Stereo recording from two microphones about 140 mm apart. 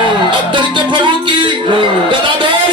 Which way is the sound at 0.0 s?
35° right (ahead or behind).